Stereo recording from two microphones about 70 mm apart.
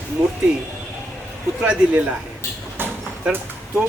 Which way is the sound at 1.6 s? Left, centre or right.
Centre.